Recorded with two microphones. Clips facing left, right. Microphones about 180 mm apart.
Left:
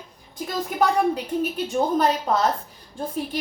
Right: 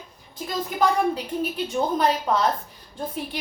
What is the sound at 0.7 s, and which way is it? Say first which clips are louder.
A woman's voice: left 1 dB; 45° left (ahead or behind).